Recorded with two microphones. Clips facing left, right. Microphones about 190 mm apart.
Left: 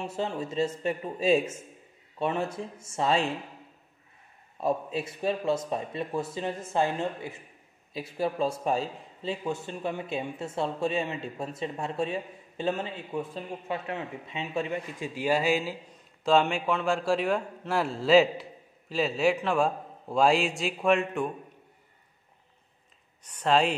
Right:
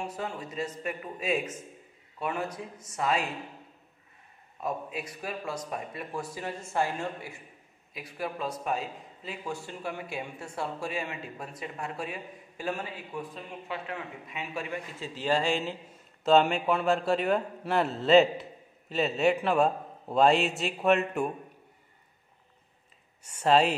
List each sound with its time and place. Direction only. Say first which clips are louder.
0.0 s a man's voice: left 4 dB; 25° left (ahead or behind)
4.6 s a man's voice: left 6 dB; 30° left (ahead or behind); by 15.8 s 5° left (ahead or behind)
15.9 s a man's voice: right 1 dB; 5° right (ahead or behind)
23.2 s speech: right 1 dB; 5° right (ahead or behind)